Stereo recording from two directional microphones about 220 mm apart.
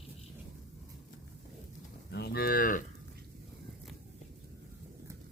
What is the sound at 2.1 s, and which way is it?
Moo, 45° left (ahead or behind).